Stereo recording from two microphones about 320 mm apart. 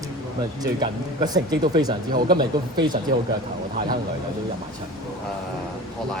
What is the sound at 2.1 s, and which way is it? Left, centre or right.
Speech, right.